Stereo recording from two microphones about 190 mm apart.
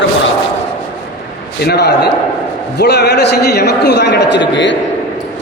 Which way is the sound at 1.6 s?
60° left (ahead or behind).